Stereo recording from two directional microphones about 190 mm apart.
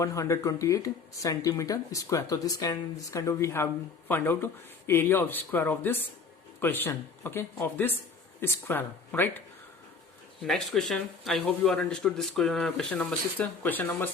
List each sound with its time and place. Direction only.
0.0 s speech: 15° left (ahead or behind)
10.4 s a man's voice: centre (ahead or behind)